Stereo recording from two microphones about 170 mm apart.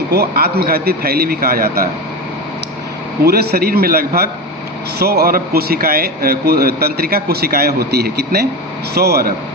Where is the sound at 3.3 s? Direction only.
65° right (ahead or behind).